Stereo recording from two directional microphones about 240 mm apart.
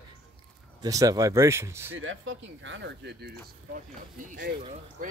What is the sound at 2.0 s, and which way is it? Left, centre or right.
Speech, right.